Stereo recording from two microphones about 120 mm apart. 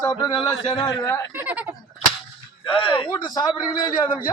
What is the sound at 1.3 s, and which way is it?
Speech, 15° right (ahead or behind).